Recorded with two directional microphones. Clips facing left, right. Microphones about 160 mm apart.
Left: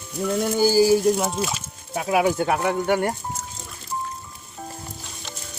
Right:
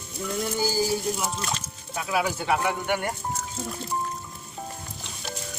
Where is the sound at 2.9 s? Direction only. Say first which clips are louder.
Left 6 dB; 35° left (ahead or behind).